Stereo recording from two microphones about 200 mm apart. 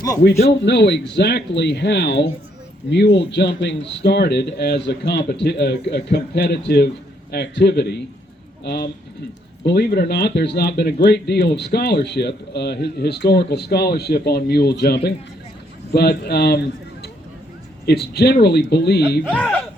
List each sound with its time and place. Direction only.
0.6 s a man's voice: 60° left (ahead or behind)
17.8 s speech: 55° left (ahead or behind)
19.3 s speech: 5° left (ahead or behind)